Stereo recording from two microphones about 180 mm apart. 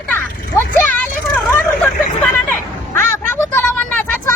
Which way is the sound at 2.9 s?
15° left (ahead or behind).